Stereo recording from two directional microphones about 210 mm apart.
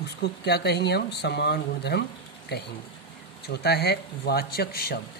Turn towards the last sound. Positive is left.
turn(degrees=45)  # may be behind; listen again after turning